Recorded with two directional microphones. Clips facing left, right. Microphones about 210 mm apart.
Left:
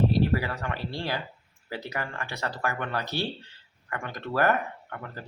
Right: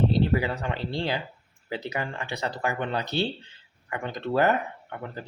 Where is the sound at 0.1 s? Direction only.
20° right (ahead or behind).